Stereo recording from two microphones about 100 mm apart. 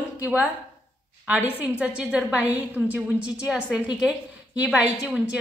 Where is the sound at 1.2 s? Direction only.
15° right (ahead or behind).